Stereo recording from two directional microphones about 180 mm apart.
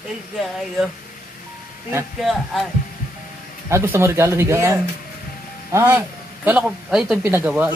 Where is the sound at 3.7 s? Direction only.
15° right (ahead or behind).